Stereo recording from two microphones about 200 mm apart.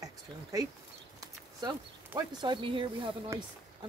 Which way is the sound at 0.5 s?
15° right (ahead or behind).